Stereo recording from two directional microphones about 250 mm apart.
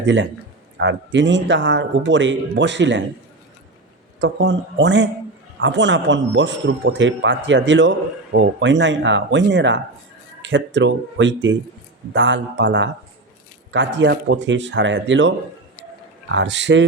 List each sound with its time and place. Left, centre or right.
0.0 s a man's voice: right
4.2 s a man's voice: right
16.3 s a man's voice: right